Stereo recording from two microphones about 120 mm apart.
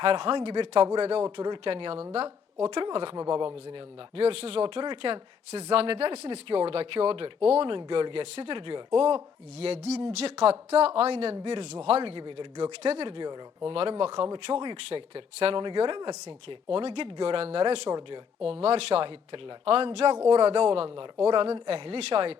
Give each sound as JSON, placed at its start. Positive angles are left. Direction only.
{"t": 0.0, "sound": "a woman's voice", "side_deg": -50}
{"t": 5.5, "sound": "speech", "side_deg": -60}
{"t": 12.8, "sound": "speech", "side_deg": -60}
{"t": 13.1, "sound": "speech", "side_deg": -40}
{"t": 13.7, "sound": "speech", "side_deg": -50}
{"t": 14.8, "sound": "speech", "side_deg": -55}